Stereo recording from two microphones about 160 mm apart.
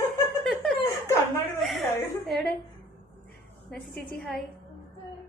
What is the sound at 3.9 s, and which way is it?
Speech, 70° left (ahead or behind).